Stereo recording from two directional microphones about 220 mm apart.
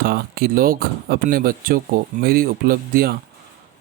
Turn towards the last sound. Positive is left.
turn(degrees=-45)  # may be behind; listen again after turning